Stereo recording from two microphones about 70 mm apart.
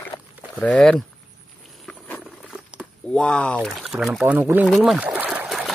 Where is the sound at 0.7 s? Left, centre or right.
Centre.